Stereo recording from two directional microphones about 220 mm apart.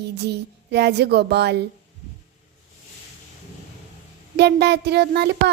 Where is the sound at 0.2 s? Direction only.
50° right (ahead or behind).